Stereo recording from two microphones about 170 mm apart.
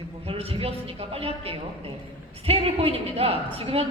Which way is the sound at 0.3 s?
35° right (ahead or behind).